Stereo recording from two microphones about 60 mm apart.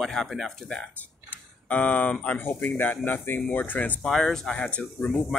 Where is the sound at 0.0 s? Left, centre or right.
Centre.